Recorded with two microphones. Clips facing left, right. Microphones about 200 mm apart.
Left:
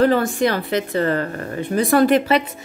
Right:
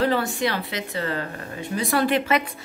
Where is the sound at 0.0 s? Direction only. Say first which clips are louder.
Left 6 dB; 45° left (ahead or behind).